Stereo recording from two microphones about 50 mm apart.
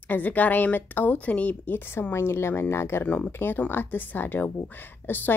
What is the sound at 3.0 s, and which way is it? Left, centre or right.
Speech, left.